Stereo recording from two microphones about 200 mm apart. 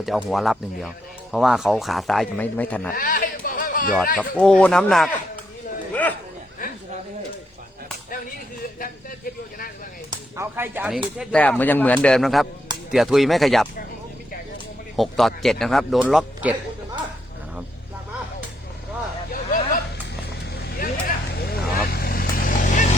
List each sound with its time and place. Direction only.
0.0 s speech: centre (ahead or behind)
2.9 s a sound: 45° left (ahead or behind)
4.4 s speech: 5° left (ahead or behind)
5.9 s a sound: 10° left (ahead or behind)
10.1 s speech: 15° right (ahead or behind)
11.2 s speech: 5° left (ahead or behind)
14.9 s speech: centre (ahead or behind)
19.3 s a sound: 45° left (ahead or behind)
20.7 s vehicle: 50° left (ahead or behind)